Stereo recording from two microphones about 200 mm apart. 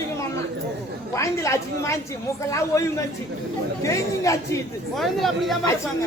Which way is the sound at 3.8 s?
15° left (ahead or behind).